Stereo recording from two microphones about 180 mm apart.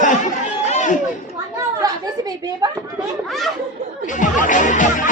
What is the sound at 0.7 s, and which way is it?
Chatter, 40° left (ahead or behind).